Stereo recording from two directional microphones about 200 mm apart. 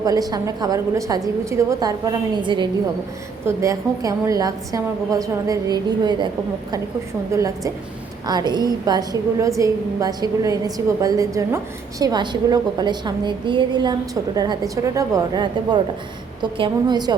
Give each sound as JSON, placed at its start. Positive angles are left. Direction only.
{"t": 0.0, "sound": "a woman's voice", "side_deg": -20}
{"t": 7.3, "sound": "a woman's voice", "side_deg": -15}